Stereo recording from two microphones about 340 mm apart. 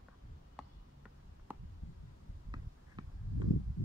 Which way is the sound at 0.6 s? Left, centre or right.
Centre.